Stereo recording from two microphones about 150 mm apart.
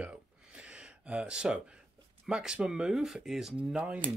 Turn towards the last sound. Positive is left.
turn(degrees=-5)  # may be behind; listen again after turning